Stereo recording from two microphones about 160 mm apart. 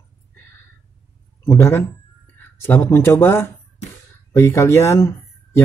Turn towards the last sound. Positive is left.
turn(degrees=20)  # may be behind; listen again after turning